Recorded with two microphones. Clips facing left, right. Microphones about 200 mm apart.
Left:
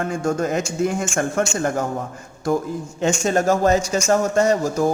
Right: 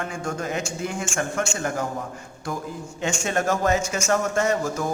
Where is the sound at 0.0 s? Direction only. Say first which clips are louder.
Left 7 dB; 45° left (ahead or behind).